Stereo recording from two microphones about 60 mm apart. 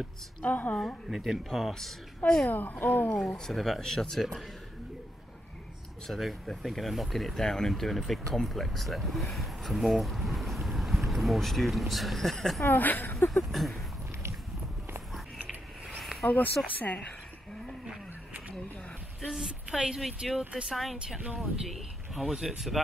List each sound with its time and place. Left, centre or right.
0.4 s speech: left
1.1 s a woman's voice: centre
2.5 s speech: left
3.2 s speech: centre
6.0 s speech: centre
12.6 s speech: left
13.3 s speech: centre
16.0 s a sound: centre
16.7 s speech: left
19.2 s a woman's voice: centre